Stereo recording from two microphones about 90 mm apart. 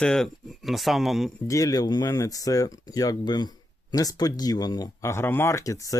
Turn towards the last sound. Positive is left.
turn(degrees=35)  # may be behind; listen again after turning